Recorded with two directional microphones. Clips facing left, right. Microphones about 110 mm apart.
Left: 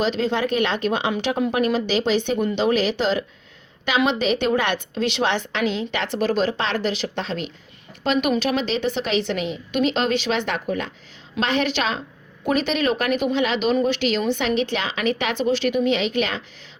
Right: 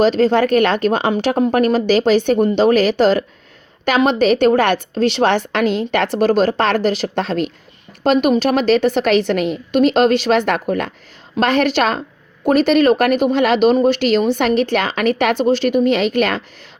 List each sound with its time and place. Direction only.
0.0 s speech: 40° right (ahead or behind)